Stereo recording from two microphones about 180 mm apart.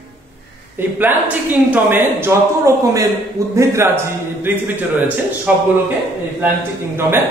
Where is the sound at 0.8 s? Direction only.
10° right (ahead or behind).